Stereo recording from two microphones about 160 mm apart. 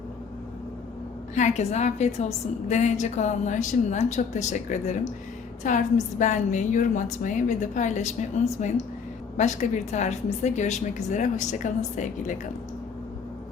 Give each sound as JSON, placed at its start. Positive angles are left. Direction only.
{"t": 1.4, "sound": "a woman's voice", "side_deg": 45}